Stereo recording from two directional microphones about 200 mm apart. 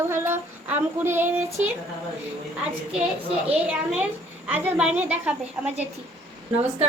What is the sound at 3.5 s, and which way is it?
A woman's voice, 5° right (ahead or behind).